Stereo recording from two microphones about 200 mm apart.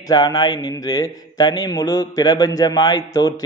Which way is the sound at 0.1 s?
20° left (ahead or behind).